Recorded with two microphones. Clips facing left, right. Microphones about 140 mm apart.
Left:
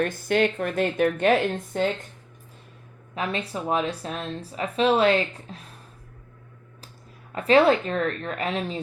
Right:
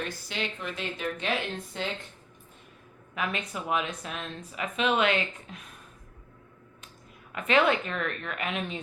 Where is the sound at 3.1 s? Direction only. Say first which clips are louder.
Left 4 dB; 30° left (ahead or behind).